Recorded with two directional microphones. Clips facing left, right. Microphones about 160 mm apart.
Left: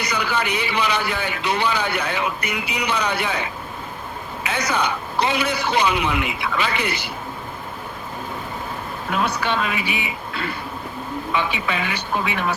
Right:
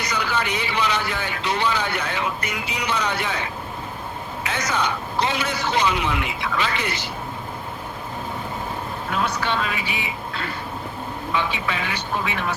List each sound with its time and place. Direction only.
0.0 s speech: 10° left (ahead or behind)
4.4 s speech: 10° left (ahead or behind)
9.4 s speech: 10° left (ahead or behind)
11.5 s speech: 10° left (ahead or behind)